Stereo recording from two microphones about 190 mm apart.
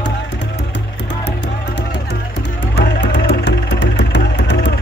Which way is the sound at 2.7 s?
60° left (ahead or behind).